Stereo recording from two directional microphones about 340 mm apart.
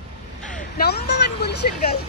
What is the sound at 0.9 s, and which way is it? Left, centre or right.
Vehicle, left.